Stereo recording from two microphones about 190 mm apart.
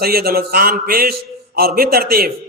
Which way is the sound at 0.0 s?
50° right (ahead or behind).